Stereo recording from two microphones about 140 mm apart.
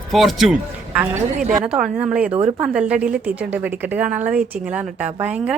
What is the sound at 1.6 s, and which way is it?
A woman's voice, 5° right (ahead or behind).